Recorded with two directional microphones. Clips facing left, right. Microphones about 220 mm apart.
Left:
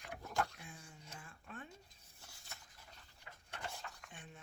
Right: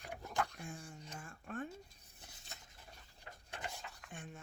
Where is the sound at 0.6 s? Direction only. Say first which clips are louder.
Right 7 dB; 45° right (ahead or behind).